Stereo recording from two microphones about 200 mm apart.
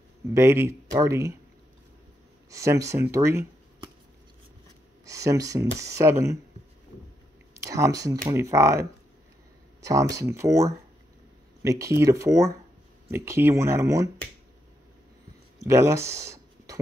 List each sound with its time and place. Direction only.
0.3 s speech: 10° right (ahead or behind)
2.5 s speech: 15° right (ahead or behind)
5.0 s speech: 15° right (ahead or behind)
7.6 s speech: 15° right (ahead or behind)
15.6 s speech: 15° right (ahead or behind)